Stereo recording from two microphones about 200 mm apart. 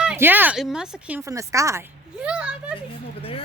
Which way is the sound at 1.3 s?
15° right (ahead or behind).